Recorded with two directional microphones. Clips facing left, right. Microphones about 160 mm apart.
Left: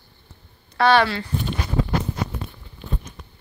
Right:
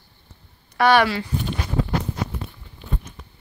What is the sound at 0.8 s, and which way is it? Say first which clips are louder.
Speech: even; 15° right (ahead or behind).